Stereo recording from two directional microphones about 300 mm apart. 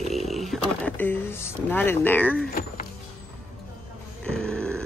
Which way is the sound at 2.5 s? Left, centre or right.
Left.